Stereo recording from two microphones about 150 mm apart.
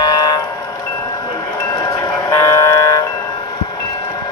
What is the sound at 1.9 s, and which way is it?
Train, 20° left (ahead or behind).